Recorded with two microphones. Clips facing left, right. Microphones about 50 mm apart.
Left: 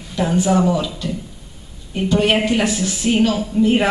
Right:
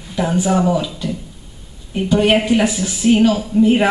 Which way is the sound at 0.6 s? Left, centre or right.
Centre.